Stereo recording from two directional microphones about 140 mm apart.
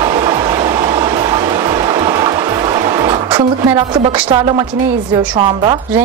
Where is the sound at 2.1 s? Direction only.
30° right (ahead or behind).